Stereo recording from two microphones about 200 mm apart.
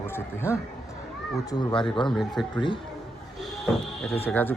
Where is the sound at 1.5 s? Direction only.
20° left (ahead or behind).